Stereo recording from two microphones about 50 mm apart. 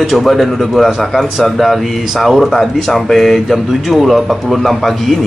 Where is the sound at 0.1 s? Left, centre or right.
Centre.